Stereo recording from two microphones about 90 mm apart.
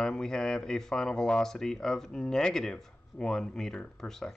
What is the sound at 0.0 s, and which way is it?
Speech, 5° left (ahead or behind).